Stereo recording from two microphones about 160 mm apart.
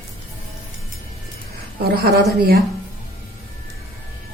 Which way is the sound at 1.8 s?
75° right (ahead or behind).